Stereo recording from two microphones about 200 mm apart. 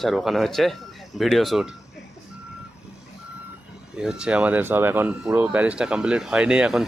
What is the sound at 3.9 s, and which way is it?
Speech, 5° right (ahead or behind).